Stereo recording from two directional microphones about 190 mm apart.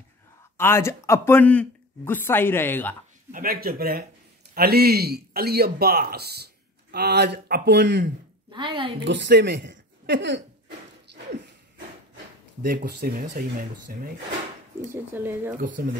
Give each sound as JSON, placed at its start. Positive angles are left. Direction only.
{"t": 0.6, "sound": "speech", "side_deg": 15}
{"t": 3.3, "sound": "a man's voice", "side_deg": -45}
{"t": 8.5, "sound": "a woman's voice", "side_deg": -25}
{"t": 9.0, "sound": "speech", "side_deg": -65}
{"t": 12.6, "sound": "speech", "side_deg": -50}
{"t": 15.1, "sound": "speech", "side_deg": -10}
{"t": 15.5, "sound": "speech", "side_deg": -45}